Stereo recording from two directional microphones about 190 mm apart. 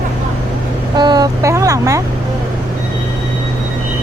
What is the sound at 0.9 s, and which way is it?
Speech, 20° right (ahead or behind).